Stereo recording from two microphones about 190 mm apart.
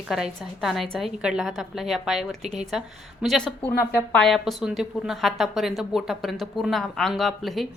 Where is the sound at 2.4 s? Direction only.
35° right (ahead or behind).